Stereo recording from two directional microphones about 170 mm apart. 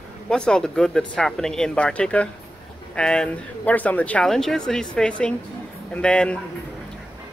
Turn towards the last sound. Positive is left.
turn(degrees=5)  # may be behind; listen again after turning